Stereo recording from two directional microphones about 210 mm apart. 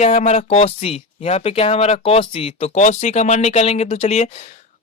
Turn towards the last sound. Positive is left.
turn(degrees=35)  # may be behind; listen again after turning